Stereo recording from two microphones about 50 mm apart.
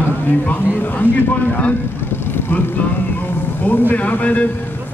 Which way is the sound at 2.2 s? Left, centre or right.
Left.